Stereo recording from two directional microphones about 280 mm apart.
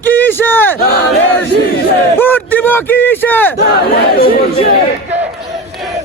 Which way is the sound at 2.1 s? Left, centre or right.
Centre.